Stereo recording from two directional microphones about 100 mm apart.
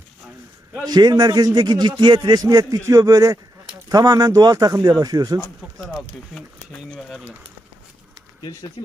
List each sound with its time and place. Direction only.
0.9 s a man's voice: 45° right (ahead or behind)
5.7 s speech: centre (ahead or behind)